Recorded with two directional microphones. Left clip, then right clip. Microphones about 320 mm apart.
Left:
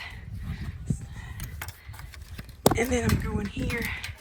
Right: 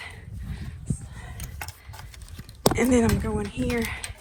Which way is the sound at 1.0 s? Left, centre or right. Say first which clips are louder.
Right 1 dB; centre.